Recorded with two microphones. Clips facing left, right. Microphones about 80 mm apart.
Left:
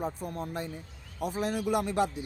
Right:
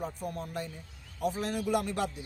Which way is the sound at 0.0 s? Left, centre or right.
Left.